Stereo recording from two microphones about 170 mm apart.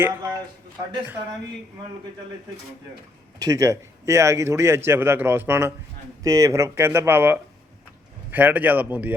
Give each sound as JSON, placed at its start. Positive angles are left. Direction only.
{"t": 0.0, "sound": "a man's voice", "side_deg": -20}
{"t": 3.3, "sound": "a man's voice", "side_deg": -20}